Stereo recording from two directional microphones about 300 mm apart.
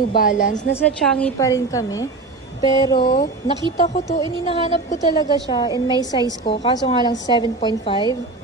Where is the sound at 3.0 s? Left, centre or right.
Left.